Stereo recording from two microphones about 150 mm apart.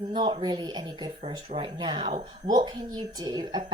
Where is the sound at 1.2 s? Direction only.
40° right (ahead or behind).